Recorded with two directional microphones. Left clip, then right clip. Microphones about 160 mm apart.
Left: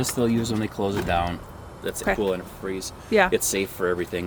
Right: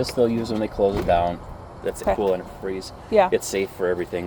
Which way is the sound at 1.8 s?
50° left (ahead or behind).